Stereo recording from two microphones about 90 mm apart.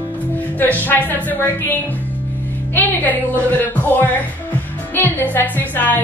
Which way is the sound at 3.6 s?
20° left (ahead or behind).